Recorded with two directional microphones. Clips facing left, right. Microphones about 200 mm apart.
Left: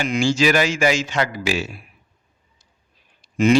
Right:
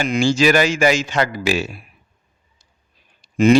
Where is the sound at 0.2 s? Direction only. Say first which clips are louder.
Right 3 dB; 60° right (ahead or behind).